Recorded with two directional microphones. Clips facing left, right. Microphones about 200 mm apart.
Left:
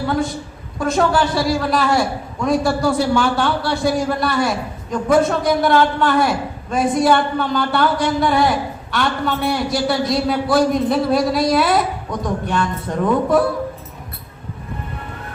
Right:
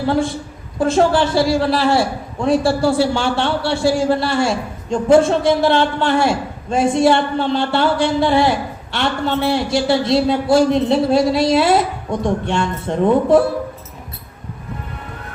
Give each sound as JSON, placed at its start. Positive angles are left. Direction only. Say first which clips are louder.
{"t": 0.8, "sound": "a man's voice", "louder": "right 3 dB", "side_deg": -30}